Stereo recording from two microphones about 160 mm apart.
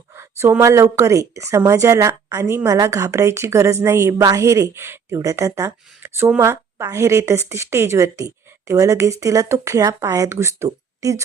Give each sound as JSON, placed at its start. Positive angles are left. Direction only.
{"t": 0.2, "sound": "speech", "side_deg": -15}